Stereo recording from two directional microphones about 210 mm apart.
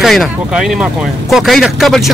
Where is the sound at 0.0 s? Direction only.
Centre (ahead or behind).